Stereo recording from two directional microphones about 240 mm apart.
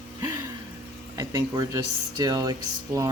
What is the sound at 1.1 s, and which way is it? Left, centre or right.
Speech, centre.